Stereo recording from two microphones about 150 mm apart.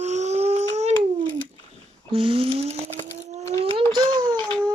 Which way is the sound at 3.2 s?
50° right (ahead or behind).